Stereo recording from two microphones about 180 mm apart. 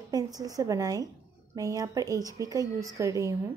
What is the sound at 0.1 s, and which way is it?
A woman's voice, 20° right (ahead or behind).